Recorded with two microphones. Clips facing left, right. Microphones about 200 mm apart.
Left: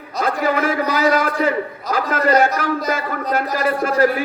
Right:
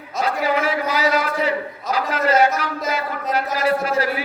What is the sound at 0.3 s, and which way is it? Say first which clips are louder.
A man's voice: left 2 dB; 50° left (ahead or behind).